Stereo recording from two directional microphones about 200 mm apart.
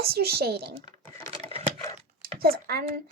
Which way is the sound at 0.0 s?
50° right (ahead or behind).